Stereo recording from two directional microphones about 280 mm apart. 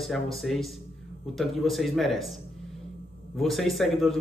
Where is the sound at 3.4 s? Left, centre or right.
Centre.